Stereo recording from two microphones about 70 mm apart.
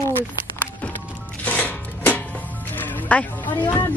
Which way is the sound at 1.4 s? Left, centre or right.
Left.